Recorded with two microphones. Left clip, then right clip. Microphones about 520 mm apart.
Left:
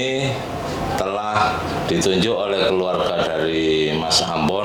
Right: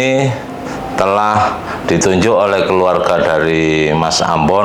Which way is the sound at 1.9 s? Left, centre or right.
Right.